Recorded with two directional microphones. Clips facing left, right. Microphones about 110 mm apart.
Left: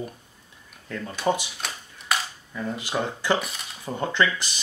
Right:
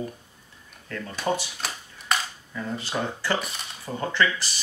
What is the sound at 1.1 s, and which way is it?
Speech, 15° left (ahead or behind).